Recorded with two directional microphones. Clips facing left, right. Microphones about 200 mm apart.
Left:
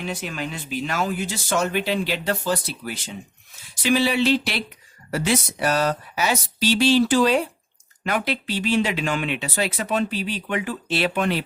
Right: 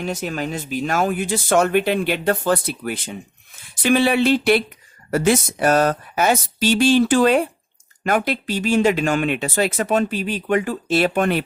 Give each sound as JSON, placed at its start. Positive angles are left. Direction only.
{"t": 0.0, "sound": "speech", "side_deg": -45}